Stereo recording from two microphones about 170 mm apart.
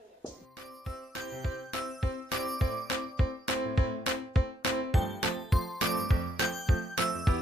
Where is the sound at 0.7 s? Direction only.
Centre (ahead or behind).